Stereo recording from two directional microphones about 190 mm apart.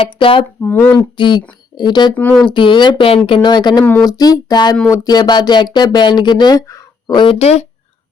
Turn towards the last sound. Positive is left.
turn(degrees=35)  # may be behind; listen again after turning